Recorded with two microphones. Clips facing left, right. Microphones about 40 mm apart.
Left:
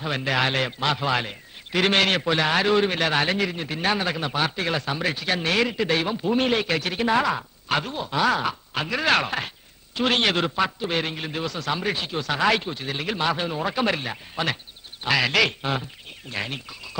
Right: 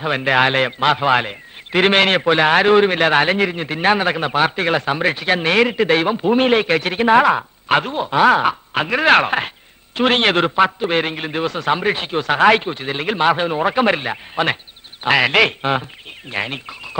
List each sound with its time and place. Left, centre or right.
0.0 s a man's voice: right